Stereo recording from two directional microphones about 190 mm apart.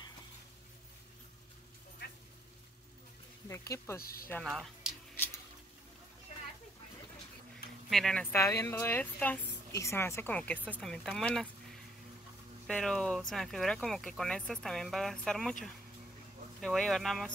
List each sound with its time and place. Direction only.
3.4 s a woman's voice: 15° left (ahead or behind)
4.0 s speech: 50° left (ahead or behind)
4.3 s speech: centre (ahead or behind)
7.9 s a woman's voice: 5° left (ahead or behind)
12.6 s speech: 5° left (ahead or behind)
16.6 s speech: 5° left (ahead or behind)